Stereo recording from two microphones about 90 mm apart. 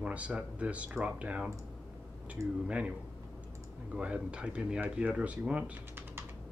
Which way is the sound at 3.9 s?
15° right (ahead or behind).